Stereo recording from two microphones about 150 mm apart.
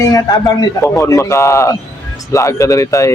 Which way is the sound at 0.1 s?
25° left (ahead or behind).